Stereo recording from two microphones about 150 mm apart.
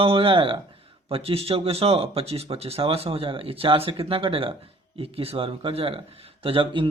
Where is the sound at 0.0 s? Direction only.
35° right (ahead or behind).